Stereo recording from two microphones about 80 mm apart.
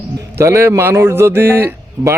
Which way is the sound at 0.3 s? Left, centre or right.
Right.